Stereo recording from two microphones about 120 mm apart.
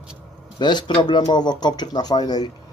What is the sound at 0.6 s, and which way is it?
Speech, 40° left (ahead or behind).